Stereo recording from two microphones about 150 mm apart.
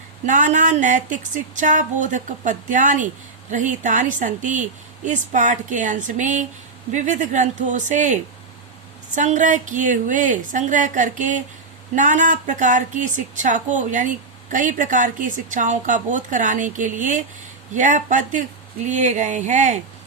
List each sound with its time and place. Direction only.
0.3 s a woman's voice: 60° right (ahead or behind)